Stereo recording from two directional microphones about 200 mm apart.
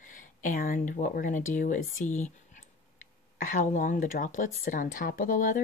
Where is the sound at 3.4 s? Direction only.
40° left (ahead or behind).